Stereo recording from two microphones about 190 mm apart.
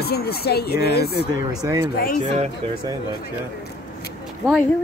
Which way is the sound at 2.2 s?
35° right (ahead or behind).